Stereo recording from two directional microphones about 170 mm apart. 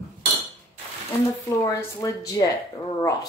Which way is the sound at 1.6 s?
20° left (ahead or behind).